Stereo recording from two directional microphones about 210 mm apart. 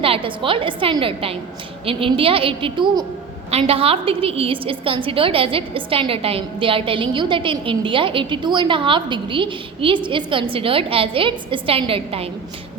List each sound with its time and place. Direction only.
0.0 s a woman's voice: 25° right (ahead or behind)